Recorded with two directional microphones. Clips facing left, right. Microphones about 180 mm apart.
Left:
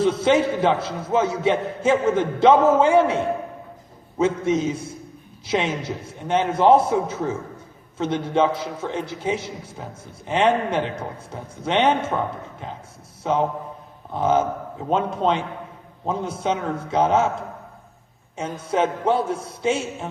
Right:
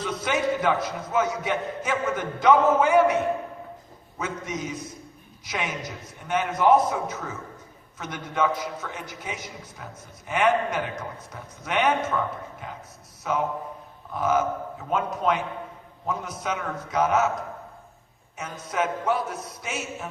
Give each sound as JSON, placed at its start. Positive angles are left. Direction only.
{"t": 0.0, "sound": "a man's voice", "side_deg": 25}
{"t": 18.3, "sound": "a man's voice", "side_deg": 30}